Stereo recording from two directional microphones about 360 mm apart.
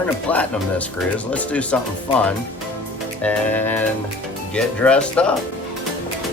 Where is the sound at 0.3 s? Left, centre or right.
Centre.